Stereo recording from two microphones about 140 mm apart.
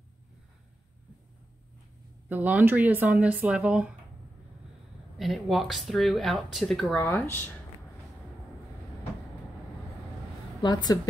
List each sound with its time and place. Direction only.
2.2 s speech: 10° right (ahead or behind)
5.1 s speech: centre (ahead or behind)
7.2 s speech: 15° left (ahead or behind)
10.6 s a woman's voice: 30° left (ahead or behind)